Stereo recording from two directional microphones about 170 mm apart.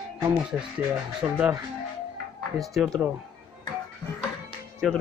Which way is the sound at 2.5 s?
Centre (ahead or behind).